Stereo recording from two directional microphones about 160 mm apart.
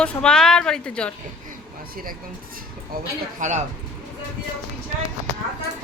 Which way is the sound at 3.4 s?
45° right (ahead or behind).